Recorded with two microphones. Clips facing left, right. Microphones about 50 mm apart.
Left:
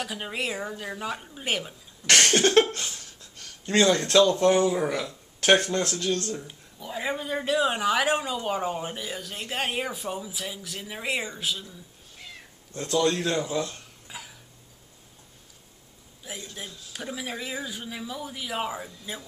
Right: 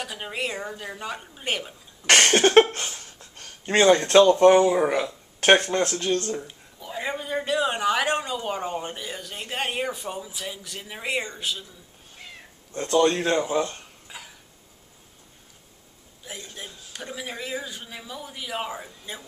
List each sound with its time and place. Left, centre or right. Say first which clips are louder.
0.0 s speech: even; centre
2.0 s speech: right 3 dB; right
6.4 s speech: even; centre
12.8 s speech: right 4 dB; right
14.0 s cough: left 1 dB; centre
16.5 s speech: even; centre